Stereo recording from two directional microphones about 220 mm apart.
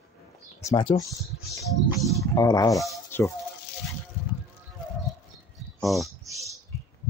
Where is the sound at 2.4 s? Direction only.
15° left (ahead or behind).